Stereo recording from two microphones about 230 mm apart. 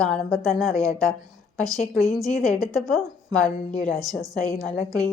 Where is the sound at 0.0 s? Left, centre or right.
Centre.